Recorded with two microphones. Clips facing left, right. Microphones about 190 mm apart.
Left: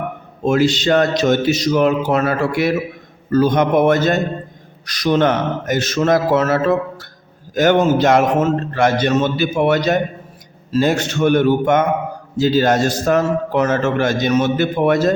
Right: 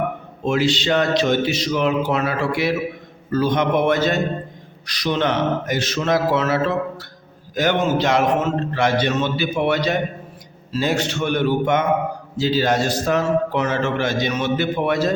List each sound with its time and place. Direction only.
0.4 s a man's voice: 45° left (ahead or behind)